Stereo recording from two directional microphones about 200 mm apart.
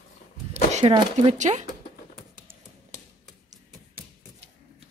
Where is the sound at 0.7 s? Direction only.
35° right (ahead or behind).